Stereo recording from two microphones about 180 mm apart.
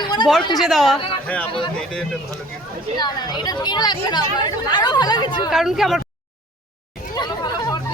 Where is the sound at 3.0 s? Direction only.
25° left (ahead or behind).